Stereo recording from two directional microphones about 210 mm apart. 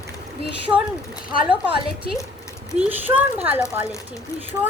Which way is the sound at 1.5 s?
25° right (ahead or behind).